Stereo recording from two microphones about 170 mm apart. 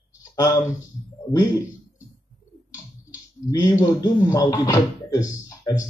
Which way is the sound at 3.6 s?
20° left (ahead or behind).